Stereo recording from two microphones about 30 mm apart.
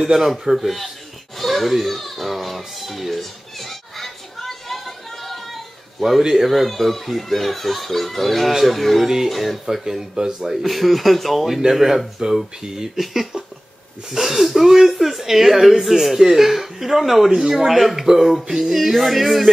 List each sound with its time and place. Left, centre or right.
0.0 s speech: centre
0.6 s a sound: centre
5.9 s a child's voice: centre
9.0 s speech: centre
9.3 s a child's voice: centre
9.7 s a child's voice: centre
12.2 s speech: right
12.9 s a child's voice: centre